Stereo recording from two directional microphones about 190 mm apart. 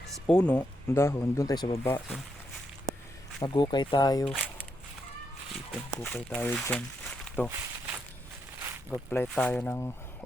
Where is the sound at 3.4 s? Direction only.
25° left (ahead or behind).